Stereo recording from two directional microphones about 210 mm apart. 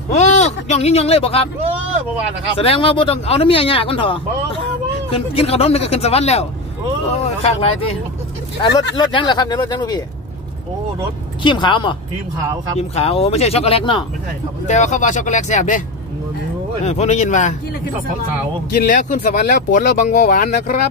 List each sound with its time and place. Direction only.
0.1 s speech: 35° left (ahead or behind)
2.5 s speech: 25° left (ahead or behind)
8.9 s speech: 20° left (ahead or behind)
11.4 s speech: 20° left (ahead or behind)
16.8 s speech: 30° left (ahead or behind)
18.9 s speech: 40° left (ahead or behind)